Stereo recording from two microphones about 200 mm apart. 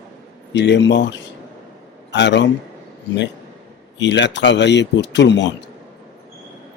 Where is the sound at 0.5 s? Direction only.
60° left (ahead or behind).